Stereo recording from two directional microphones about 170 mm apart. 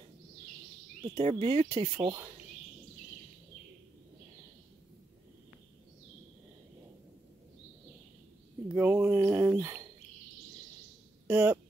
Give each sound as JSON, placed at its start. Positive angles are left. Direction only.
{"t": 1.1, "sound": "speech", "side_deg": -25}
{"t": 8.7, "sound": "a sound", "side_deg": -10}
{"t": 11.2, "sound": "speech", "side_deg": -10}